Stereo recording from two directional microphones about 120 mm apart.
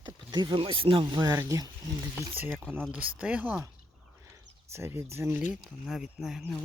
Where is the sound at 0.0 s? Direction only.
40° right (ahead or behind).